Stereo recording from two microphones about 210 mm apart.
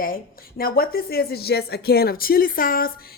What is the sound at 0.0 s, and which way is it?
Speech, 45° left (ahead or behind).